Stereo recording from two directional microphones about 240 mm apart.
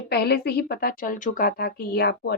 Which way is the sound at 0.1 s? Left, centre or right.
Left.